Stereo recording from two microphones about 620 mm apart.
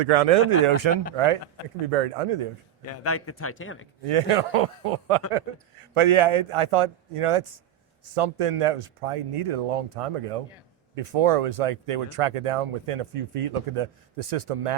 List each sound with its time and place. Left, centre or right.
0.0 s speech: right
1.1 s speech: right
2.8 s speech: left
4.0 s speech: right